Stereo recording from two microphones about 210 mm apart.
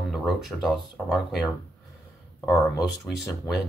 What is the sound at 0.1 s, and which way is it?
Speech, centre (ahead or behind).